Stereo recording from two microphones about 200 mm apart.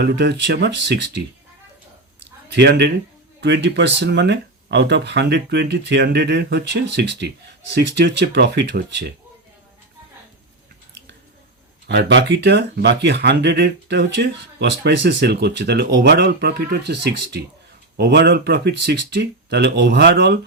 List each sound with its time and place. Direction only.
0.0 s speech: 60° right (ahead or behind)
2.5 s speech: 55° right (ahead or behind)
11.9 s speech: 60° right (ahead or behind)